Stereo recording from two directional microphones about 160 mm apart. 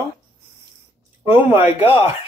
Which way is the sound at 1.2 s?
15° right (ahead or behind).